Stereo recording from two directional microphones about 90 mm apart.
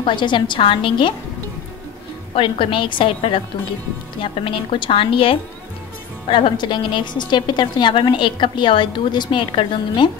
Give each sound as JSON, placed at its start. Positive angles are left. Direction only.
{"t": 0.0, "sound": "a woman's voice", "side_deg": 65}
{"t": 2.3, "sound": "a woman's voice", "side_deg": 75}
{"t": 6.2, "sound": "a woman's voice", "side_deg": 70}